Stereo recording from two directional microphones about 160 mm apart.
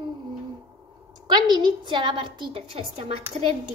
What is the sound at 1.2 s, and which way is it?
A woman's voice, 25° right (ahead or behind).